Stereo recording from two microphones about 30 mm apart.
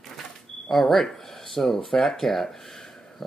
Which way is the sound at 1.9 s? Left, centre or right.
Centre.